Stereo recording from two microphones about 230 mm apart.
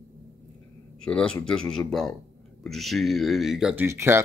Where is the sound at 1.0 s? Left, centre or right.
Centre.